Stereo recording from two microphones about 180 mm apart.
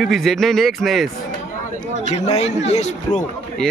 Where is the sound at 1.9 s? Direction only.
40° left (ahead or behind).